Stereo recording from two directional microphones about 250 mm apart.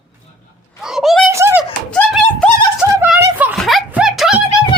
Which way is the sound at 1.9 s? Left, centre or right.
Centre.